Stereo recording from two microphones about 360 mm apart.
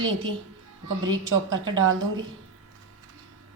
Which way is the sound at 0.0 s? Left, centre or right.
Right.